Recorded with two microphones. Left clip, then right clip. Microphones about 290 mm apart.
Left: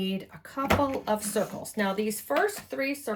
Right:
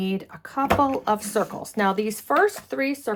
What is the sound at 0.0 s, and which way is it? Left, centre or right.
A woman's voice, centre.